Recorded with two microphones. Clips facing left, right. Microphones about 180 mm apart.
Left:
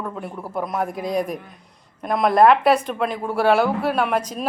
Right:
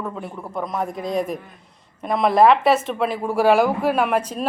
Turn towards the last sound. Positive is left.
turn(degrees=-10)  # may be behind; listen again after turning